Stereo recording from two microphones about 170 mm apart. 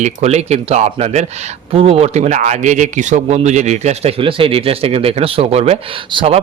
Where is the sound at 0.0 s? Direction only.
40° right (ahead or behind).